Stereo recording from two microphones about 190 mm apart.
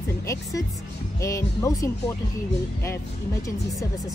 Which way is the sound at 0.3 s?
15° left (ahead or behind).